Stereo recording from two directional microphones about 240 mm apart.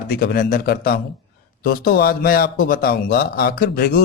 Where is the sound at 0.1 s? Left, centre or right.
Left.